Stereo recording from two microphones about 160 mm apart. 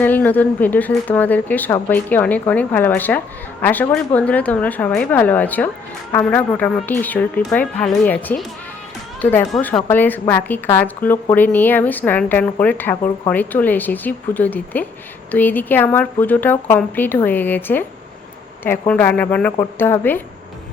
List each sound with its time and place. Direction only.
0.0 s speech: 10° left (ahead or behind)